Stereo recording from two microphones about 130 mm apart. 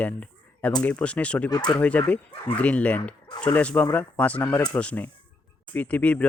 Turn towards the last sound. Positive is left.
turn(degrees=10)  # may be behind; listen again after turning